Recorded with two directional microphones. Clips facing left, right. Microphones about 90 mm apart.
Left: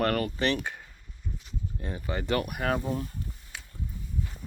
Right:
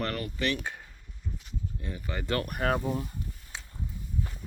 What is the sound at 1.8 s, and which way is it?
Speech, 30° left (ahead or behind).